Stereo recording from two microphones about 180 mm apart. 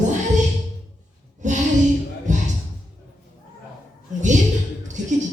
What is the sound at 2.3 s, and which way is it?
Music, 40° right (ahead or behind).